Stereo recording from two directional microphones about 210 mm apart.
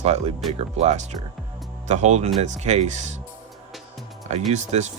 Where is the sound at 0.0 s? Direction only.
30° right (ahead or behind).